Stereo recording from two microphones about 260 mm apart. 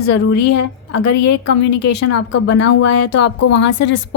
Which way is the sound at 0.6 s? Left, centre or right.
Left.